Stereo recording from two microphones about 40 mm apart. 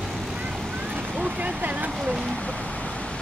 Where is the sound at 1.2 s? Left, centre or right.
Right.